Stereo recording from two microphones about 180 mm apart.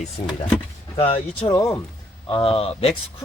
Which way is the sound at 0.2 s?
40° left (ahead or behind).